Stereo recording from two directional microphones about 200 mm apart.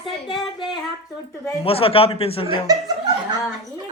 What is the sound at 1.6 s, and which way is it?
Speech, 30° left (ahead or behind).